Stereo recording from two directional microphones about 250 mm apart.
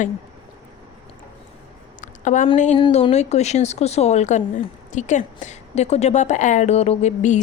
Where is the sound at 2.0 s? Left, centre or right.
Left.